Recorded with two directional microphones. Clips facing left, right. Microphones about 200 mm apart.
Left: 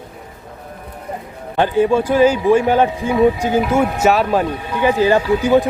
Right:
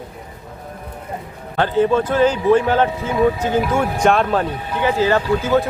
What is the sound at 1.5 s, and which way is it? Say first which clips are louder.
Speech: left 2 dB; 15° left (ahead or behind).